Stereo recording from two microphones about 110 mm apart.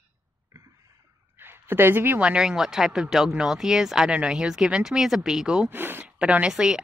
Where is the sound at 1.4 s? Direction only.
20° right (ahead or behind).